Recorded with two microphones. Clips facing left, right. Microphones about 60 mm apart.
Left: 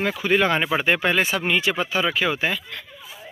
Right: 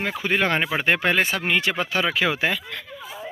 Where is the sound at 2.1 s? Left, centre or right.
Right.